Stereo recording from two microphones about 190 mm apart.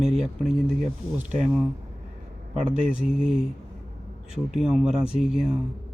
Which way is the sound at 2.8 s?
5° right (ahead or behind).